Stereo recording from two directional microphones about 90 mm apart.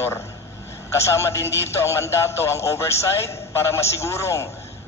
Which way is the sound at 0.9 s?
30° left (ahead or behind).